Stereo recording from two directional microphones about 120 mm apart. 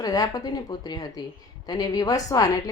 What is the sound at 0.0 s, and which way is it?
A woman's voice, 30° left (ahead or behind).